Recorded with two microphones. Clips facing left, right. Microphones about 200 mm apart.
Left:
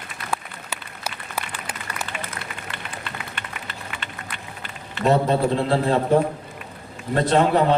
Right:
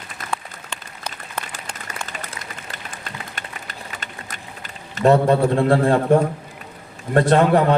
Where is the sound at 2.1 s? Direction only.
45° right (ahead or behind).